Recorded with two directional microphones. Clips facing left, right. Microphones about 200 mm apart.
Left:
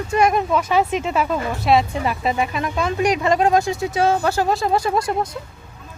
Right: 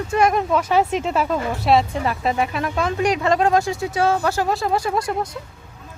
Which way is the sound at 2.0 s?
10° left (ahead or behind).